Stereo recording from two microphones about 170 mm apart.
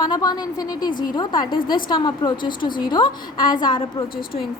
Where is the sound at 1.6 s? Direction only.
55° left (ahead or behind).